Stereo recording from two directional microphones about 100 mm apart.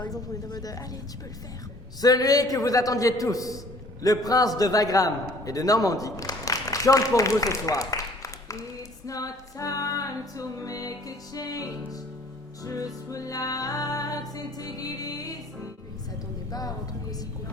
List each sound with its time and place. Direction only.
0.0 s a man's voice: 40° left (ahead or behind)
2.0 s a man's voice: 40° left (ahead or behind)
9.0 s music: 35° left (ahead or behind)
16.5 s a man's voice: 40° left (ahead or behind)